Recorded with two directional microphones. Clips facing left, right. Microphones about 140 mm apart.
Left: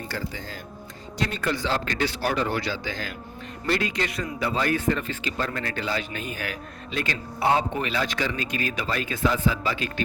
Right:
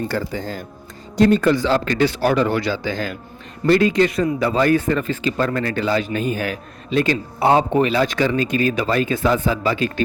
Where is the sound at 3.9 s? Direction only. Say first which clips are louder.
Right 12 dB; 30° right (ahead or behind).